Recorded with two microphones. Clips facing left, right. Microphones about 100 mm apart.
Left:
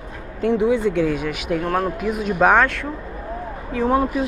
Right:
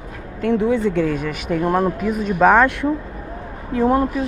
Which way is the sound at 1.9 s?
5° left (ahead or behind).